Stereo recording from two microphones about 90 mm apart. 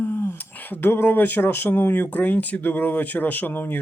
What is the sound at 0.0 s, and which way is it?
Speech, 25° left (ahead or behind).